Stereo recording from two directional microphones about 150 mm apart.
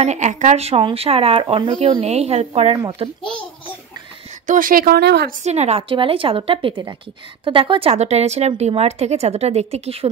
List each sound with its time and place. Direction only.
0.0 s speech: 50° right (ahead or behind)
4.5 s speech: 65° right (ahead or behind); by 5.3 s 90° right
5.4 s a woman's voice: 45° right (ahead or behind)